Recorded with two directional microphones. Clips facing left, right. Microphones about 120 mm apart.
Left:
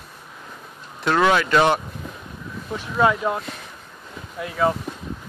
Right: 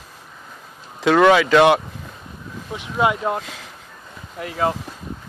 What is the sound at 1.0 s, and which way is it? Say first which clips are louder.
Speech: right 5 dB; 90° right.